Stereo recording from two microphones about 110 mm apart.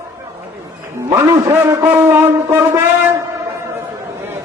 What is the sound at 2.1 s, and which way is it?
Speech, 25° right (ahead or behind).